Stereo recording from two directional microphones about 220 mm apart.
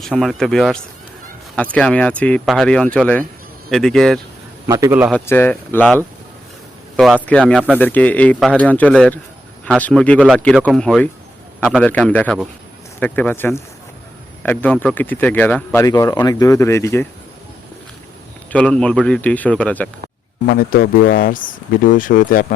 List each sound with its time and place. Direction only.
0.0 s speech: centre (ahead or behind)
4.6 s a man's voice: 10° right (ahead or behind)
5.1 s speech: 10° left (ahead or behind)
18.5 s speech: 5° left (ahead or behind)
20.5 s speech: 40° left (ahead or behind)